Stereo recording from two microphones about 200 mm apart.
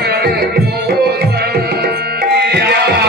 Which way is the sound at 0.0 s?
50° right (ahead or behind).